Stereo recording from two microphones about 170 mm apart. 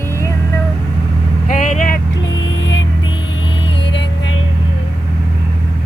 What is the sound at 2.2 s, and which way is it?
Vehicle, 90° left.